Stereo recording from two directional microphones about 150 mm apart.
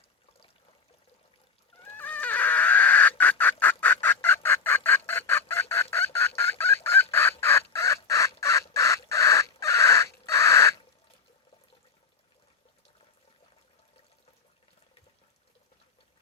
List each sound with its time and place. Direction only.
1.8 s chicken: 10° left (ahead or behind)
10.2 s bird: 20° left (ahead or behind)